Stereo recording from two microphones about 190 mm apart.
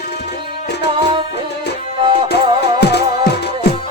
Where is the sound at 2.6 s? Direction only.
60° left (ahead or behind).